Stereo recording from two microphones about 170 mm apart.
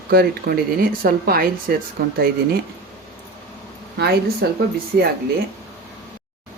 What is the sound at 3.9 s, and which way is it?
Speech, 75° right (ahead or behind).